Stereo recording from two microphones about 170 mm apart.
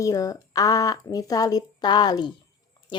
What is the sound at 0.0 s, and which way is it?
A woman's voice, 20° left (ahead or behind).